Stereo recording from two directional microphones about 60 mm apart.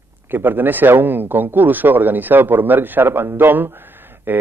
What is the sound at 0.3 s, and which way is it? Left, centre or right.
A man's voice, right.